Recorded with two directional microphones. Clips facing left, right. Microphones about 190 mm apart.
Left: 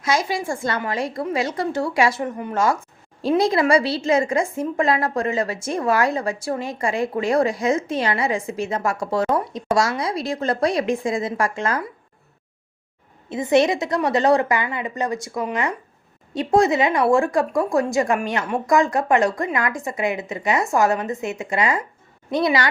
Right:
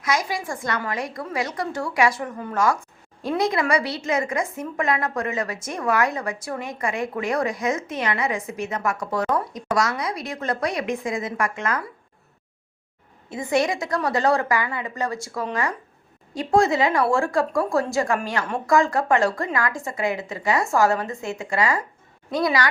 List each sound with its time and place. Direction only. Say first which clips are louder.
0.0 s a woman's voice: left 3 dB; 25° left (ahead or behind)
13.3 s a woman's voice: left 5 dB; 20° left (ahead or behind)